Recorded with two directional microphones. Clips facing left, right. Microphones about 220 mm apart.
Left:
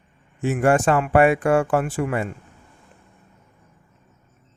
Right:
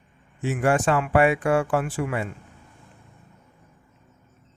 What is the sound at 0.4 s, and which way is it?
A man's voice, 50° left (ahead or behind).